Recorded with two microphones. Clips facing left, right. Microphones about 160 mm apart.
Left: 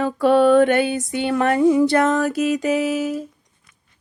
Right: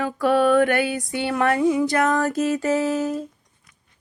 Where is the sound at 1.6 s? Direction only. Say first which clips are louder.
Left 4 dB; 40° left (ahead or behind).